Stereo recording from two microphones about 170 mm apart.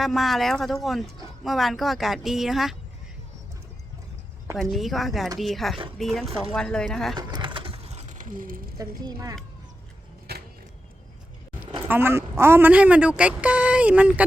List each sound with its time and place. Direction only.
0.0 s speech: centre (ahead or behind)
4.5 s speech: centre (ahead or behind)
7.2 s a sound: 25° right (ahead or behind); by 8.6 s 55° right (ahead or behind)
8.8 s speech: 20° right (ahead or behind)
10.3 s a sound: 70° right (ahead or behind)
11.9 s speech: 15° right (ahead or behind)